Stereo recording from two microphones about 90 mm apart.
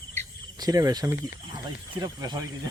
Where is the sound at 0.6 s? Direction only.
45° right (ahead or behind).